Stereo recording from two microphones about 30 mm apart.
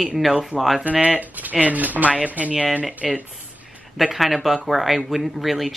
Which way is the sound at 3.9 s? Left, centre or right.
Centre.